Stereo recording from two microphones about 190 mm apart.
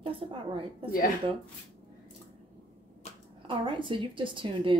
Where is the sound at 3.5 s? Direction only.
25° right (ahead or behind).